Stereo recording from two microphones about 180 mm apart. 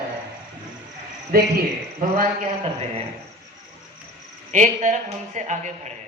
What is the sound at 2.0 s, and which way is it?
Speech, 50° right (ahead or behind).